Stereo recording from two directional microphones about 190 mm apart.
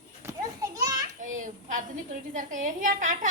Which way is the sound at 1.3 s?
45° right (ahead or behind).